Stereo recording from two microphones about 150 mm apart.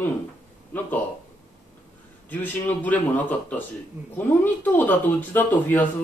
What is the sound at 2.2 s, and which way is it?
Speech, 10° left (ahead or behind).